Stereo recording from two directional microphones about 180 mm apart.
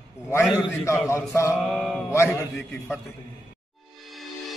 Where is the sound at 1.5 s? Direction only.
Centre (ahead or behind).